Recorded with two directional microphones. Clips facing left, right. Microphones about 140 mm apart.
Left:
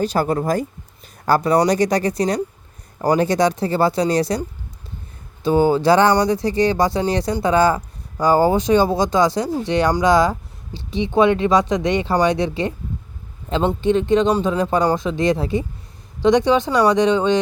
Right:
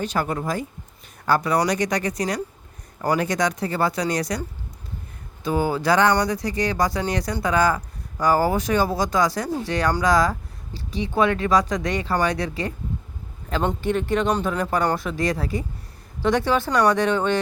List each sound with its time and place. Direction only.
0.0 s speech: 35° left (ahead or behind)
5.4 s speech: 30° left (ahead or behind)